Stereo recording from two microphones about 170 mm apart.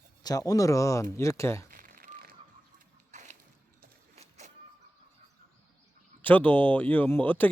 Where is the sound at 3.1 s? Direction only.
45° right (ahead or behind).